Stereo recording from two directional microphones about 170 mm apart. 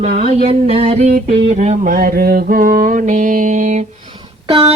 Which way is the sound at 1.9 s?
60° right (ahead or behind).